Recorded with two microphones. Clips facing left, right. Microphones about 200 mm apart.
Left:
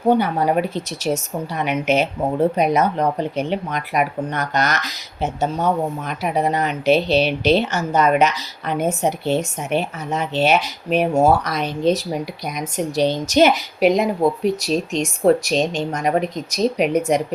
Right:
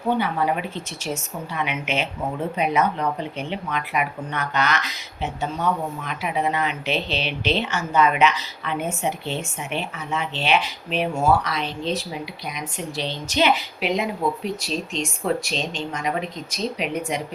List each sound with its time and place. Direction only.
0.1 s a woman's voice: 40° left (ahead or behind)